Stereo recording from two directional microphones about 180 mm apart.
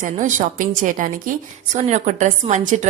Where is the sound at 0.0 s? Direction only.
45° right (ahead or behind).